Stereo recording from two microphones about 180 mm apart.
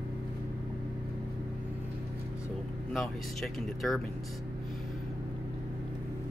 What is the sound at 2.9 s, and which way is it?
Speech, centre (ahead or behind).